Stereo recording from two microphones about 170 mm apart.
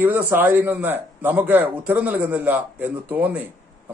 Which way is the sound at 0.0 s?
10° right (ahead or behind).